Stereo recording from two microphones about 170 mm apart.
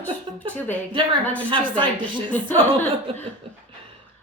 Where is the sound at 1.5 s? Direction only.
30° right (ahead or behind).